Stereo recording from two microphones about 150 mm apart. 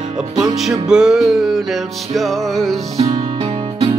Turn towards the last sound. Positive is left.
turn(degrees=-40)  # may be behind; listen again after turning